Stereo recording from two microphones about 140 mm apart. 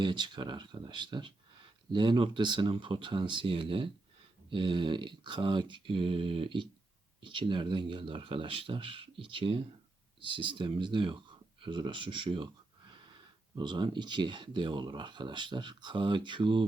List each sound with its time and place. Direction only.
0.0 s speech: 35° right (ahead or behind)
13.6 s speech: 35° right (ahead or behind)